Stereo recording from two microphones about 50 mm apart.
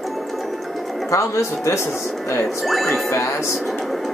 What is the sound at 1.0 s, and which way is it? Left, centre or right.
Speech, left.